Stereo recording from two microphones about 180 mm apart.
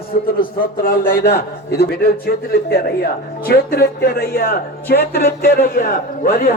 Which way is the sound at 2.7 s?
60° left (ahead or behind).